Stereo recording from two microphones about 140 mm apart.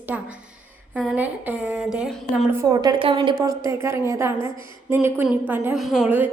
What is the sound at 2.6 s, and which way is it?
A woman's voice, 30° right (ahead or behind).